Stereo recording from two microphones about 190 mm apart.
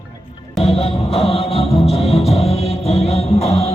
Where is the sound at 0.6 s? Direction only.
30° left (ahead or behind).